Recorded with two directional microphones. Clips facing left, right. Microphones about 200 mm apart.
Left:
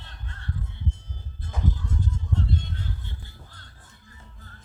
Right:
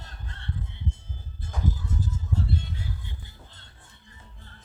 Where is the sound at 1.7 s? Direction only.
5° right (ahead or behind); by 4.5 s 25° right (ahead or behind).